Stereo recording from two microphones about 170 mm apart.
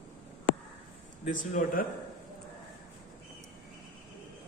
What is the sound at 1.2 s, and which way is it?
Speech, 50° left (ahead or behind).